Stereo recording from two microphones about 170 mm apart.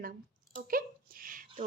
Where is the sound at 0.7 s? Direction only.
55° right (ahead or behind).